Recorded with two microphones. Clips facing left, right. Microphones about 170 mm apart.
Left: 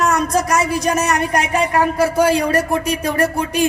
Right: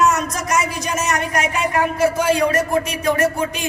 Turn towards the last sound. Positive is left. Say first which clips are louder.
# left 3 dB
turn(degrees=35)  # may be behind; listen again after turning